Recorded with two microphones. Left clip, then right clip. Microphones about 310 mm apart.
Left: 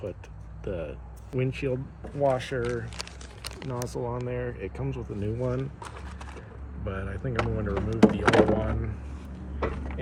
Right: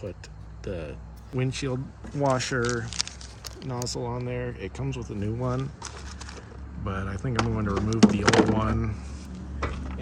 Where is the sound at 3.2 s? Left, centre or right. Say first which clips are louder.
Left 1 dB; left.